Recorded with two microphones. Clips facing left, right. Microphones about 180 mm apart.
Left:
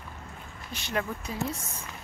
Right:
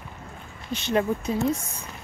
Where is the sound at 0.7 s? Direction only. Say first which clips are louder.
Right 8 dB; 25° right (ahead or behind).